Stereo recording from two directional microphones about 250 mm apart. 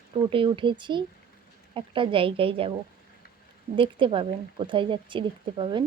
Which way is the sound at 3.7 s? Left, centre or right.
Centre.